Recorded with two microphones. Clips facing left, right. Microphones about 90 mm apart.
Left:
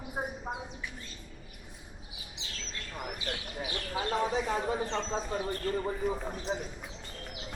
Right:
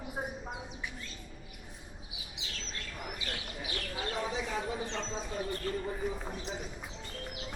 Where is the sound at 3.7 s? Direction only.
35° left (ahead or behind).